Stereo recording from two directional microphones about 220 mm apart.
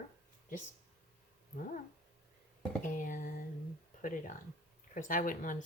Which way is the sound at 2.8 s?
35° left (ahead or behind).